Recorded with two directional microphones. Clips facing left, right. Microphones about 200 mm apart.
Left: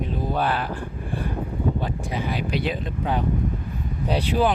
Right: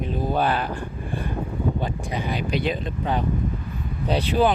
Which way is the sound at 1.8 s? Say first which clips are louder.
Even; 5° left (ahead or behind).